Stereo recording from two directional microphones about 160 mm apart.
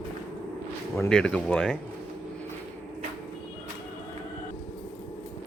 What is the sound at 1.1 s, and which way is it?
Speech, 5° left (ahead or behind).